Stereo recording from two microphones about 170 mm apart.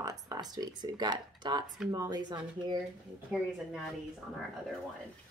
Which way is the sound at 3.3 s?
5° right (ahead or behind).